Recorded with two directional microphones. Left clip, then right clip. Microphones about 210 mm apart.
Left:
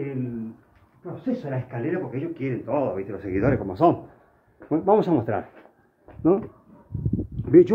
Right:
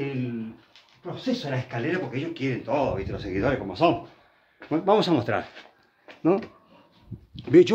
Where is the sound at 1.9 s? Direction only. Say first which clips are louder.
Left 1 dB; 5° left (ahead or behind).